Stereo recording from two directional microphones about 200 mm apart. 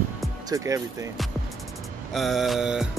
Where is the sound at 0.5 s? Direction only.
15° right (ahead or behind).